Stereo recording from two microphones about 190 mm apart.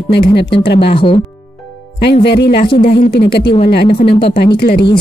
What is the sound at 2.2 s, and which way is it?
Speech, 60° left (ahead or behind).